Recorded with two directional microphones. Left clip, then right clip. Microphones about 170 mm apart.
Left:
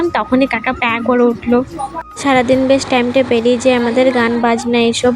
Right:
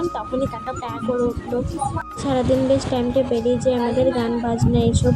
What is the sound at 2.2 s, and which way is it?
Speech, 30° left (ahead or behind).